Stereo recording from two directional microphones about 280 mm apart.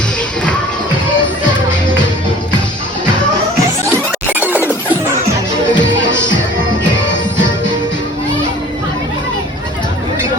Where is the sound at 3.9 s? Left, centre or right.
Centre.